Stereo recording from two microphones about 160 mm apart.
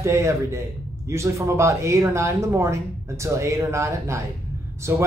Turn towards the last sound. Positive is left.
turn(degrees=-20)  # may be behind; listen again after turning